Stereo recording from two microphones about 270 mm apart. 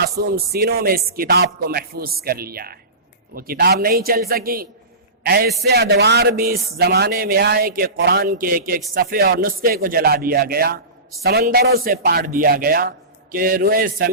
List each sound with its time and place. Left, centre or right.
0.0 s speech: right